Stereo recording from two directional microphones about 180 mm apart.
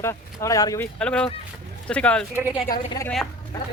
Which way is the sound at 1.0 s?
5° left (ahead or behind).